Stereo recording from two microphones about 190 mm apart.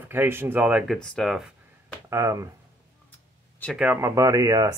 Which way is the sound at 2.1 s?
15° right (ahead or behind).